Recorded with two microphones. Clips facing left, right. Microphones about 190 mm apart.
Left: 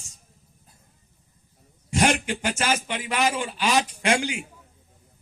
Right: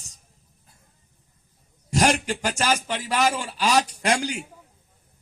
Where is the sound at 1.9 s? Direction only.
40° right (ahead or behind).